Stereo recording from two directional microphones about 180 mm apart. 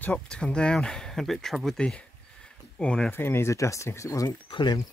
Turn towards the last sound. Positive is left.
turn(degrees=25)  # may be behind; listen again after turning